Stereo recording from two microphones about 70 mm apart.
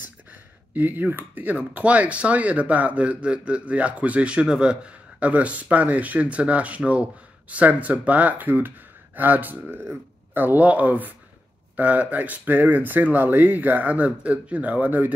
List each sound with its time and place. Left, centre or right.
0.7 s speech: right